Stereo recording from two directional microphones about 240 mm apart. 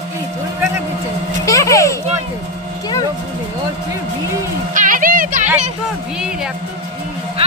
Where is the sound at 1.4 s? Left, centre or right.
Centre.